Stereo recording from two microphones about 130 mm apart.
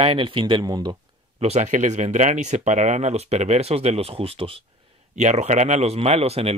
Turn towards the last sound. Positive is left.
turn(degrees=-50)  # may be behind; listen again after turning